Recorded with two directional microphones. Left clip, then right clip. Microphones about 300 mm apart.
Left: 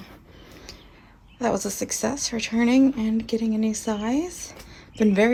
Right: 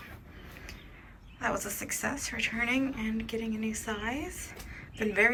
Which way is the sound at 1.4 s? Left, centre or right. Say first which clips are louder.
Left 8 dB; centre.